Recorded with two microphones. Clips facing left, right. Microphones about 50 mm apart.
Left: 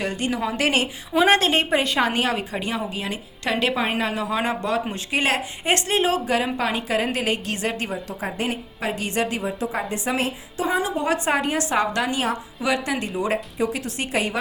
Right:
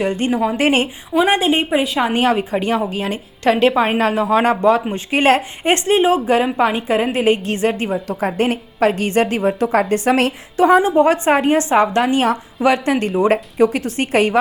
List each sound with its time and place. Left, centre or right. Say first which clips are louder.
0.3 s a woman's voice: right 7 dB; centre
0.6 s a woman's voice: right 5 dB; right
1.3 s a woman's voice: right 3 dB; centre
2.1 s a woman's voice: right 7 dB; right
8.4 s a woman's voice: right 12 dB; right
10.8 s a woman's voice: right 10 dB; right